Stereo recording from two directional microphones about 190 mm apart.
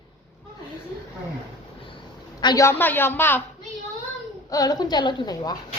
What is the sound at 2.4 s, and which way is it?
A woman's voice, 20° left (ahead or behind).